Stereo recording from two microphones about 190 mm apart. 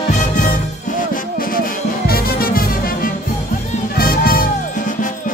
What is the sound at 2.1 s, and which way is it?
Music, 50° left (ahead or behind).